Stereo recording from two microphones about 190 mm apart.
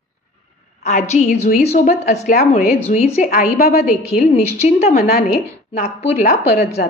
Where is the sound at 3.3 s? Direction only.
50° left (ahead or behind).